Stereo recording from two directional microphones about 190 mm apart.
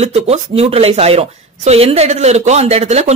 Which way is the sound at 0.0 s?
35° right (ahead or behind).